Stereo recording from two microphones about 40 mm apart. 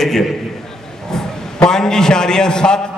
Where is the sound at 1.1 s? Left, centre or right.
Centre.